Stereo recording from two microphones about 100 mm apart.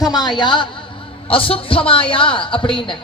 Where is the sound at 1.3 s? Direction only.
65° left (ahead or behind).